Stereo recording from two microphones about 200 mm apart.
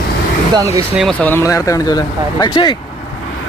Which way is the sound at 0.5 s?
15° right (ahead or behind).